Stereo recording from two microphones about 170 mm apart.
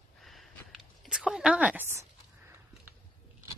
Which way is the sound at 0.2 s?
Centre (ahead or behind).